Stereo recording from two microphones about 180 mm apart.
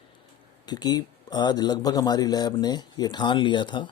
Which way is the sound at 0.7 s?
20° left (ahead or behind).